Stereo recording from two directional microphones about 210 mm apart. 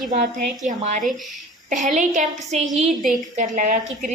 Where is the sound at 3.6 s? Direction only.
40° right (ahead or behind).